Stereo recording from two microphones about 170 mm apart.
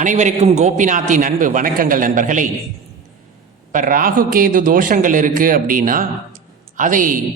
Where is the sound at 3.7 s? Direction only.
55° right (ahead or behind).